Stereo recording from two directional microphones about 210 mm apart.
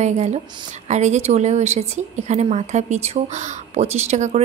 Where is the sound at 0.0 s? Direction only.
35° right (ahead or behind).